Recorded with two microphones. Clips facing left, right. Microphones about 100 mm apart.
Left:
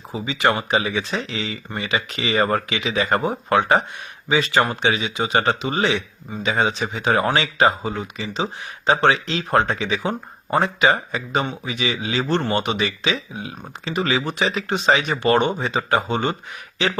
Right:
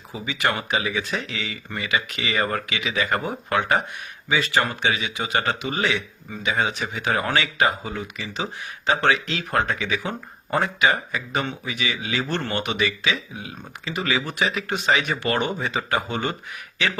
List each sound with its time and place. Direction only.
0.1 s speech: 25° left (ahead or behind)